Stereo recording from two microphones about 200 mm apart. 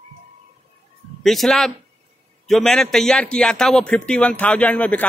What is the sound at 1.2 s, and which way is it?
A man's voice, centre (ahead or behind).